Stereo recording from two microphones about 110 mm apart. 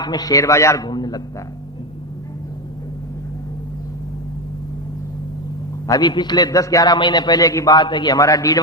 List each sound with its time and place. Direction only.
0.0 s a man's voice: 35° left (ahead or behind)
0.9 s a man's voice: 40° left (ahead or behind)
5.9 s a man's voice: 40° left (ahead or behind)